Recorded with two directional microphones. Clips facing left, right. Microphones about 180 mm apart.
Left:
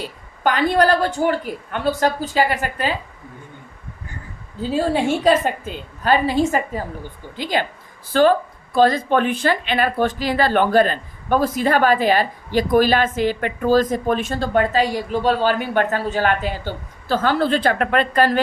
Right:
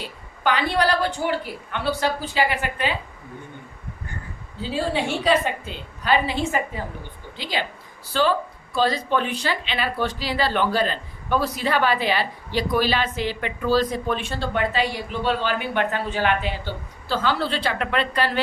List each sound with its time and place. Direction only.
0.0 s speech: 45° left (ahead or behind)
4.6 s speech: 45° left (ahead or behind)